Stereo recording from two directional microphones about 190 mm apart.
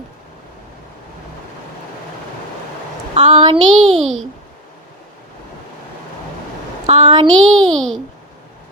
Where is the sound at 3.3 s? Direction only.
25° right (ahead or behind).